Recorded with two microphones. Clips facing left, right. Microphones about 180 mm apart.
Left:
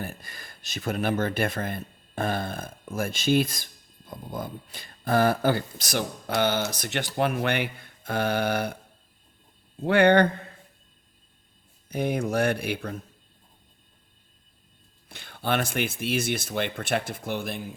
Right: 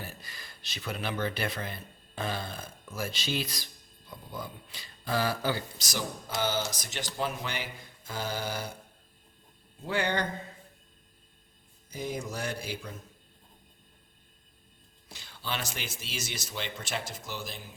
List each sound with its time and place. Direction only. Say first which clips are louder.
0.0 s speech: left 7 dB; 50° left (ahead or behind)
9.8 s speech: left 12 dB; 65° left (ahead or behind)
11.9 s speech: left 9 dB; 60° left (ahead or behind)
15.1 s speech: left 10 dB; 55° left (ahead or behind)